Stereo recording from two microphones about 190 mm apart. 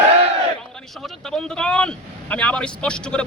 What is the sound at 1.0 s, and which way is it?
Speech, 5° left (ahead or behind).